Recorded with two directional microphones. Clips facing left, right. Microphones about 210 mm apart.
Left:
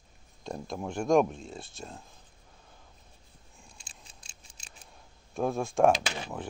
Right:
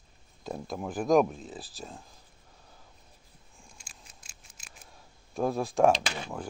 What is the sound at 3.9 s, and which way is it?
Scissors, 30° left (ahead or behind).